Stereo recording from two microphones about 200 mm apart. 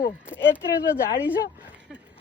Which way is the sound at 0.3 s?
10° left (ahead or behind).